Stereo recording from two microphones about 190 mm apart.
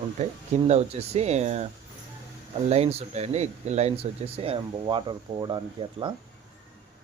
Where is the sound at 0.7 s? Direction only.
35° right (ahead or behind).